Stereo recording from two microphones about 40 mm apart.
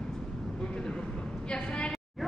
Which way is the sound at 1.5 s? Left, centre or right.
Left.